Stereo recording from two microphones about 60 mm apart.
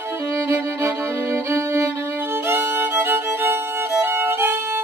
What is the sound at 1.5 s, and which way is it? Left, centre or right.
Violin, right.